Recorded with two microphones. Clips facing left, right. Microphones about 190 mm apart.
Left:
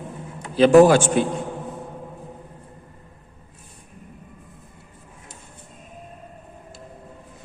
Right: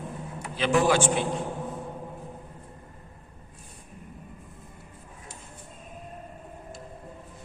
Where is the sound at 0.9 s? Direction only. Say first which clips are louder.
Left 6 dB; 45° left (ahead or behind).